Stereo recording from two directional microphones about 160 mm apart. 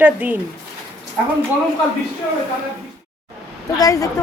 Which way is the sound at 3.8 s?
20° left (ahead or behind).